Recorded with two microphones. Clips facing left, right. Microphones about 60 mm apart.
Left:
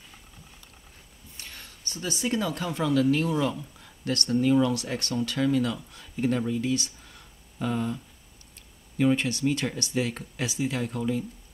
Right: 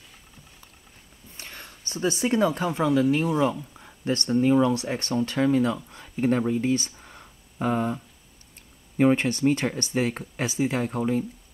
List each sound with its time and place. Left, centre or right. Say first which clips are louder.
1.3 s speech: right 3 dB; right